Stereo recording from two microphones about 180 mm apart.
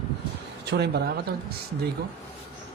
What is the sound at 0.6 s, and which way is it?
Speech, 70° right (ahead or behind).